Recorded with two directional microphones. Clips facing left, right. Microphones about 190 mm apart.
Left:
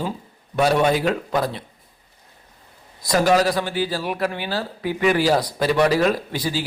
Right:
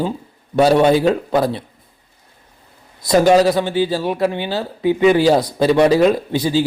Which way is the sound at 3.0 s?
25° right (ahead or behind).